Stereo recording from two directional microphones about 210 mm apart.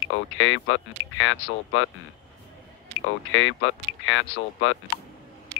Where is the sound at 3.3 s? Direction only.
65° left (ahead or behind).